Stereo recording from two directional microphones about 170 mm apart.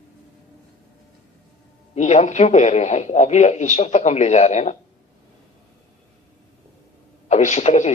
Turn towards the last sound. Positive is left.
turn(degrees=40)  # may be behind; listen again after turning